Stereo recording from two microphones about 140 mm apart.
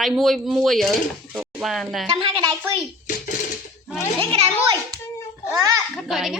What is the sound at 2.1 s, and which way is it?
Speech, 35° right (ahead or behind).